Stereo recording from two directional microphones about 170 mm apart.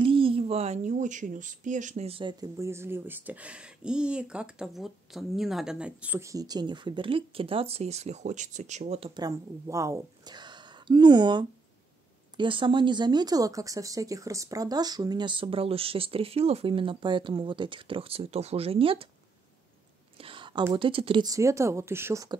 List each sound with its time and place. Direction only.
0.0 s a woman's voice: 30° right (ahead or behind)
2.5 s speech: 15° right (ahead or behind); by 9.1 s 40° right (ahead or behind)
9.1 s a woman's voice: 20° right (ahead or behind)
20.2 s a sound: 30° right (ahead or behind)
20.7 s speech: 30° right (ahead or behind); by 22.3 s 15° right (ahead or behind)